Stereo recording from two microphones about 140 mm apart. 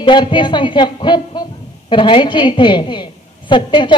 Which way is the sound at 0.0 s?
35° left (ahead or behind).